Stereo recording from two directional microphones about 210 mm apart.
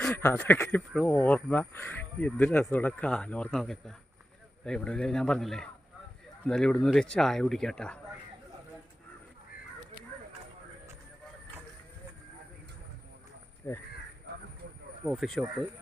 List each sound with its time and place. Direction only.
0.0 s speech: 10° left (ahead or behind)
13.6 s speech: 10° left (ahead or behind)
14.3 s a sound: 50° right (ahead or behind)
15.0 s speech: centre (ahead or behind)